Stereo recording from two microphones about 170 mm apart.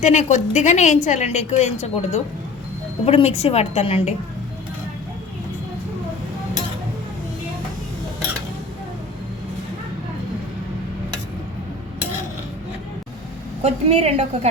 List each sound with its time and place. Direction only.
0.0 s a woman's voice: 45° left (ahead or behind)
13.6 s a woman's voice: 35° right (ahead or behind)